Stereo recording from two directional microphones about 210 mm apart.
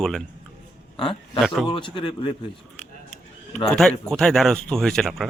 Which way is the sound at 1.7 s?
25° left (ahead or behind).